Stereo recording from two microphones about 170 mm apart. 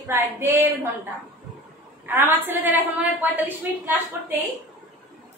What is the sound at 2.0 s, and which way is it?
A woman's voice, 10° right (ahead or behind).